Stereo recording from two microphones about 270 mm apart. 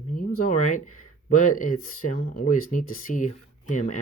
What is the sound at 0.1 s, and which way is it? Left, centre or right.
Speech, left.